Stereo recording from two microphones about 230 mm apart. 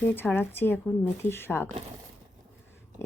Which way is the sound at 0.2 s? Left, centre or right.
Centre.